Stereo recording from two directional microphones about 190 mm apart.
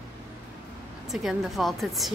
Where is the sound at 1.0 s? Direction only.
Centre (ahead or behind).